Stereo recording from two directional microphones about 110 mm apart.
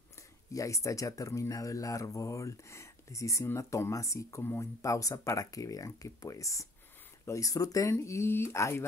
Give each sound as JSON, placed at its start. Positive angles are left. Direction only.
{"t": 0.5, "sound": "speech", "side_deg": 30}